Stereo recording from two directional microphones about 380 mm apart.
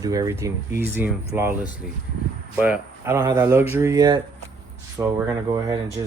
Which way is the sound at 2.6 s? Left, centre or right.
Centre.